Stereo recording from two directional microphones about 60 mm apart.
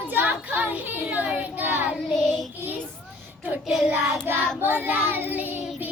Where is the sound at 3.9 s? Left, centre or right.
Right.